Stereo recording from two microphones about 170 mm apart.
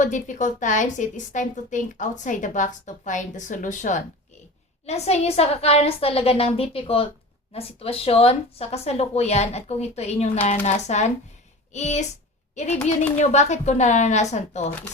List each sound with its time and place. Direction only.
0.0 s a woman's voice: 50° left (ahead or behind)